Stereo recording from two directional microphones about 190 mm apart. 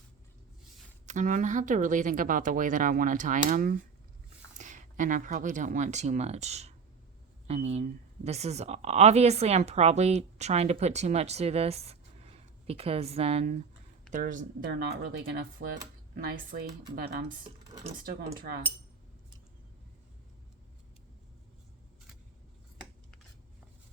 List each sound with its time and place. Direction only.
1.0 s speech: 40° right (ahead or behind)
14.7 s speech: 60° right (ahead or behind)
17.2 s speech: 25° right (ahead or behind)
17.9 s speech: 45° right (ahead or behind)